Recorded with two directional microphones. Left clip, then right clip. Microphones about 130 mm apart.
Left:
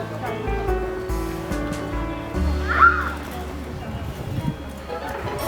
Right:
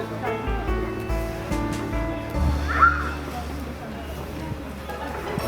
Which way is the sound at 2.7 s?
40° left (ahead or behind).